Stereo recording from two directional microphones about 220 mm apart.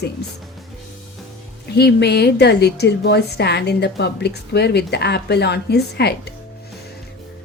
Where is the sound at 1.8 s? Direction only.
50° left (ahead or behind).